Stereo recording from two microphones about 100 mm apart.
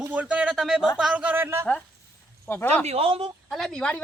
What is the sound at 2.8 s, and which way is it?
Speech, 85° right.